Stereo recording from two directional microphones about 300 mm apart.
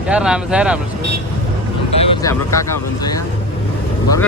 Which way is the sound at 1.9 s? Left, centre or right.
Centre.